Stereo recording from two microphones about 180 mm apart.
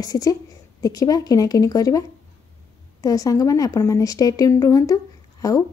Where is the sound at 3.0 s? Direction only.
20° left (ahead or behind).